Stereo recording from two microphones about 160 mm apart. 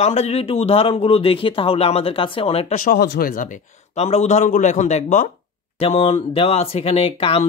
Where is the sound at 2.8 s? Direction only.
75° left (ahead or behind); by 5.3 s 50° left (ahead or behind).